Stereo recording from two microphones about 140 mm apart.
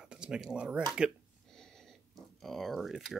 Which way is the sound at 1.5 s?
5° left (ahead or behind).